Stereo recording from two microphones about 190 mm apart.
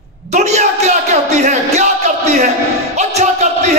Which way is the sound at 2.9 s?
35° right (ahead or behind).